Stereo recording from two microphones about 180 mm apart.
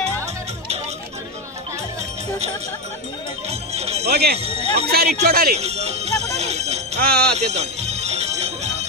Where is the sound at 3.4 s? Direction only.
35° right (ahead or behind).